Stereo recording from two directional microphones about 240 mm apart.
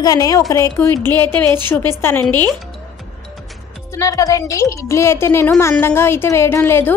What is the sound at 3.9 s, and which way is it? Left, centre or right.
A woman's voice, centre.